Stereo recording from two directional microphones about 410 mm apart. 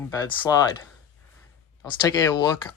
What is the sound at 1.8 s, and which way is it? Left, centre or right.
Speech, centre.